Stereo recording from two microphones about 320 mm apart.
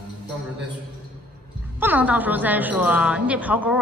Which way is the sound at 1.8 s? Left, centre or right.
Centre.